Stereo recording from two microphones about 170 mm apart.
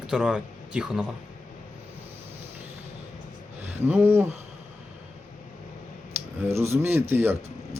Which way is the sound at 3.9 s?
10° right (ahead or behind).